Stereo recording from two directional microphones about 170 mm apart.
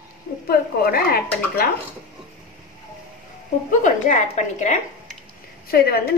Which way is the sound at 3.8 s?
45° left (ahead or behind).